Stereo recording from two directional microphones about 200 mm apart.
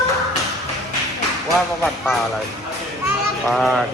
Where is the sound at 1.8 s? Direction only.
Centre (ahead or behind).